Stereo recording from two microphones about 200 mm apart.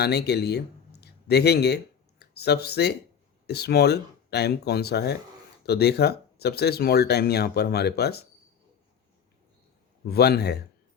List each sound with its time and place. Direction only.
0.0 s speech: 55° left (ahead or behind)
10.1 s speech: 55° left (ahead or behind)